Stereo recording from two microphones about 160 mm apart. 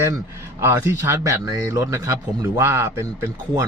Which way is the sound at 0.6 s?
15° right (ahead or behind).